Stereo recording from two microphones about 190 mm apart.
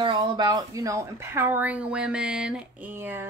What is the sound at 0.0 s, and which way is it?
A woman's voice, 25° right (ahead or behind).